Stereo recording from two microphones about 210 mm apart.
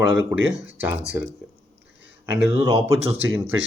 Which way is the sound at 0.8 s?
10° right (ahead or behind).